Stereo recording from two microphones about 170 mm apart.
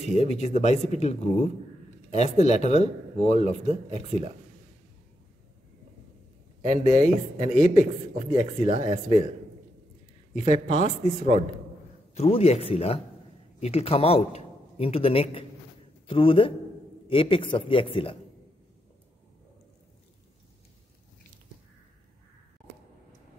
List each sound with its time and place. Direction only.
0.1 s speech: 40° left (ahead or behind)
6.6 s speech: 40° left (ahead or behind)
10.3 s a man's voice: 45° left (ahead or behind)